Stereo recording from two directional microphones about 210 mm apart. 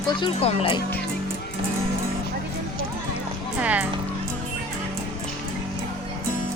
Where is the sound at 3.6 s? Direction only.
5° right (ahead or behind).